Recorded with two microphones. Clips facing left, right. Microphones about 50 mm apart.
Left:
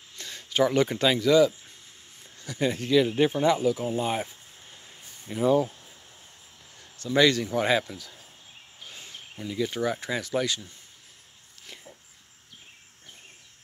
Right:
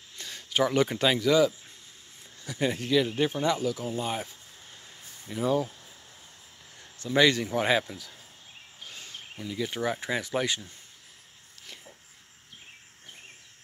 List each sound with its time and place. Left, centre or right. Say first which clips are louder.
0.2 s speech: left 2 dB; centre
3.2 s speech: left 4 dB; centre
7.0 s speech: left 1 dB; centre
8.9 s a sound: even; centre
9.5 s speech: left 2 dB; centre